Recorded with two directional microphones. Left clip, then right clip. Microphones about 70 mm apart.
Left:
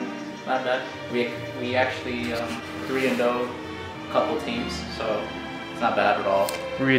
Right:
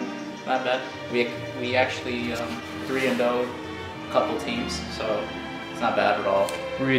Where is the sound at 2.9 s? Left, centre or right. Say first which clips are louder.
Even; right.